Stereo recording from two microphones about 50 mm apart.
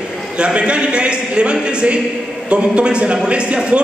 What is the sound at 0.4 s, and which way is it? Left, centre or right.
A man's voice, right.